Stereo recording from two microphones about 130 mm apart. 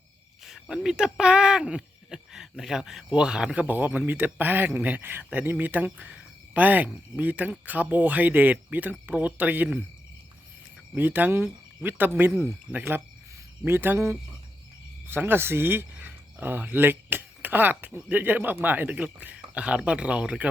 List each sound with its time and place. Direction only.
0.4 s speech: centre (ahead or behind)
10.9 s speech: 15° right (ahead or behind)